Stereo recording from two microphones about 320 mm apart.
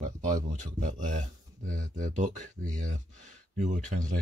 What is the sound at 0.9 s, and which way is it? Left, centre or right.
Speech, right.